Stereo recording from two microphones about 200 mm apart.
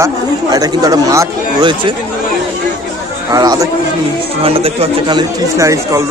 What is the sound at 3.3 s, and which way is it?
Speech, 20° right (ahead or behind).